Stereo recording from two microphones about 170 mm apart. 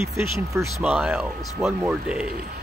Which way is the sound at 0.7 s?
5° right (ahead or behind).